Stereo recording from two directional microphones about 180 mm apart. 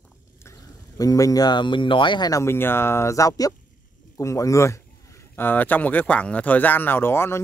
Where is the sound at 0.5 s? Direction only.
20° left (ahead or behind).